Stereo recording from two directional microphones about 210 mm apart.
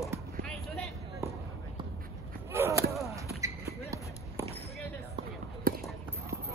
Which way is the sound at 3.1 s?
15° right (ahead or behind).